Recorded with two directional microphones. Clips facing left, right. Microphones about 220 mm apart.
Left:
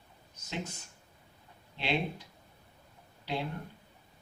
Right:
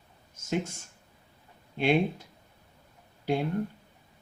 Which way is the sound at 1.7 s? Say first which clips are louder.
Right 8 dB; 50° right (ahead or behind).